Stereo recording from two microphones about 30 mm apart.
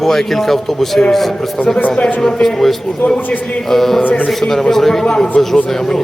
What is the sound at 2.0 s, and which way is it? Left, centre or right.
Speech, centre.